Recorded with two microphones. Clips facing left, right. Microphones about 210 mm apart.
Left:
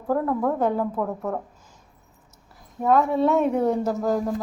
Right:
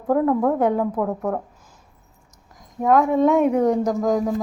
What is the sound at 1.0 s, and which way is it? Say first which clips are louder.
Speech: right 3 dB; 10° right (ahead or behind).